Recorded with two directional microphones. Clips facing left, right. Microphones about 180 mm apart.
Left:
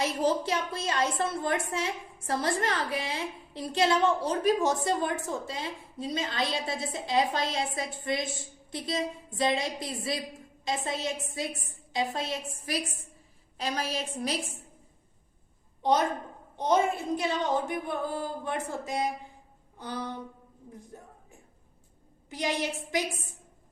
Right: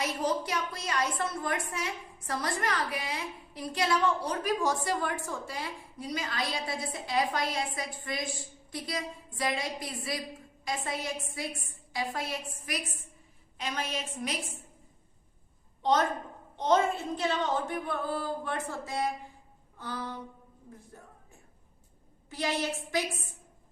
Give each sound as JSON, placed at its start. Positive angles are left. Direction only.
{"t": 0.0, "sound": "a woman's voice", "side_deg": 30}
{"t": 15.8, "sound": "a woman's voice", "side_deg": 15}
{"t": 22.3, "sound": "a woman's voice", "side_deg": 15}